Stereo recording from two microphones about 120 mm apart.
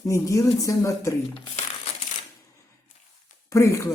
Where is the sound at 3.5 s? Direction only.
25° left (ahead or behind).